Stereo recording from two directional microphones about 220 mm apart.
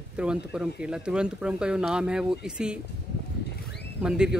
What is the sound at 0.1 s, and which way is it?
Speech, 5° right (ahead or behind).